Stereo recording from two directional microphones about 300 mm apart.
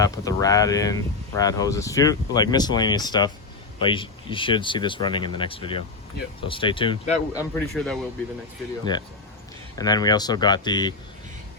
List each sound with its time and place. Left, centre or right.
0.0 s speech: centre
7.5 s speech: centre
8.8 s speech: centre